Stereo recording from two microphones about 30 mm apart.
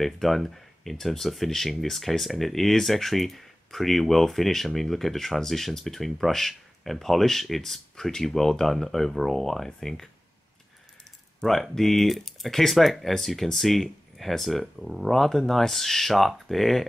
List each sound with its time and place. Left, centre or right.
0.0 s speech: centre
11.7 s speech: centre